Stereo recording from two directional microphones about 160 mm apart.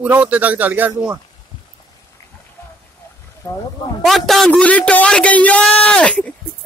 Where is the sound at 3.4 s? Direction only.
15° left (ahead or behind).